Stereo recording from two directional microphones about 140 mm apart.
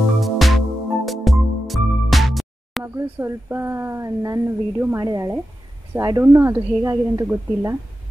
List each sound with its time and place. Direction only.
0.2 s music: centre (ahead or behind)
2.8 s speech: 15° right (ahead or behind)